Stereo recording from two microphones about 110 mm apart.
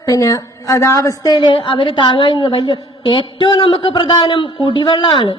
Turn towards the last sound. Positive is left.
turn(degrees=50)  # may be behind; listen again after turning